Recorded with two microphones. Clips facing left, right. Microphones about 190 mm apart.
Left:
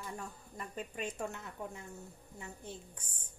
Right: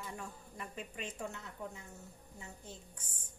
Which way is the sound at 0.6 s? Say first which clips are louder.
Left 4 dB; 45° left (ahead or behind).